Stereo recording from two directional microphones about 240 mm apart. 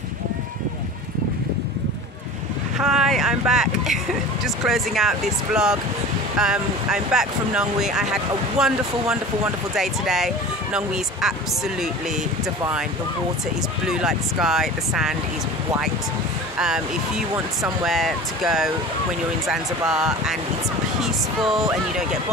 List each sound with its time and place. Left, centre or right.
2.8 s speech: centre
13.8 s speech: centre
16.5 s speech: centre
17.8 s speech: centre
19.9 s speech: centre